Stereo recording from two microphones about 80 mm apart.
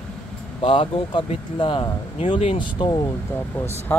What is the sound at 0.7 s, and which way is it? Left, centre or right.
Speech, left.